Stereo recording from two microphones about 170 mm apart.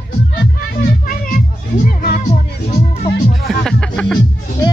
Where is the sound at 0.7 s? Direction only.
55° left (ahead or behind).